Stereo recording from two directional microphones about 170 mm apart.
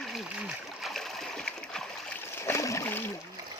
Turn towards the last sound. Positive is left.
turn(degrees=15)  # may be behind; listen again after turning